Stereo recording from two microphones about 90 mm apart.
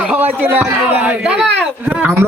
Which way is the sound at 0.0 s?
15° right (ahead or behind).